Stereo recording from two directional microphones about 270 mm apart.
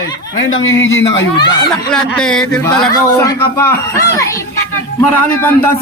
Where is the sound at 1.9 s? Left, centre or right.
Centre.